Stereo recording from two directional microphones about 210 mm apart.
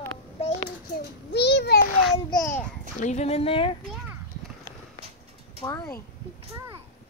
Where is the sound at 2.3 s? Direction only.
15° left (ahead or behind).